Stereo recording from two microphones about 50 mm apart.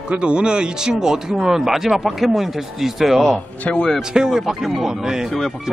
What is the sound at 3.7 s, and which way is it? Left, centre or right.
Speech, left.